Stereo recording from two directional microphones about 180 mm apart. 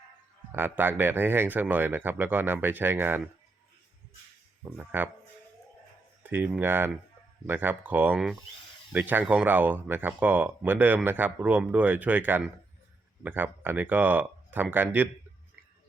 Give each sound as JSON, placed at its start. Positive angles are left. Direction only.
{"t": 0.5, "sound": "speech", "side_deg": -10}
{"t": 4.8, "sound": "speech", "side_deg": -10}
{"t": 6.2, "sound": "speech", "side_deg": -10}